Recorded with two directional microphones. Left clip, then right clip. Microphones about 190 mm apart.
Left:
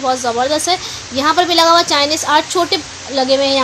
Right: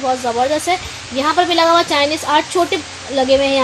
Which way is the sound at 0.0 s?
15° left (ahead or behind).